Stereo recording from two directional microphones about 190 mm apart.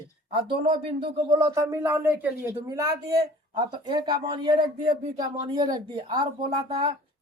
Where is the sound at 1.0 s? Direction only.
25° right (ahead or behind).